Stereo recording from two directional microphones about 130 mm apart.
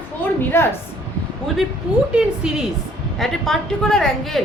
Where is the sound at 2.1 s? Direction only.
5° right (ahead or behind).